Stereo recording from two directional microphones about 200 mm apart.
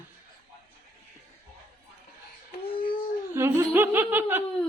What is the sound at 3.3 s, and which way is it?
A man's voice, 10° right (ahead or behind).